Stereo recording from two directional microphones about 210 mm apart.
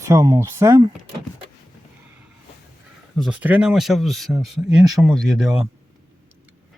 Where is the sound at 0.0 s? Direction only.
15° right (ahead or behind).